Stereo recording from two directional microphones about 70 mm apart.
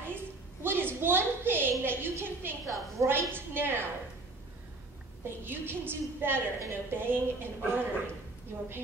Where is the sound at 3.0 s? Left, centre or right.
Right.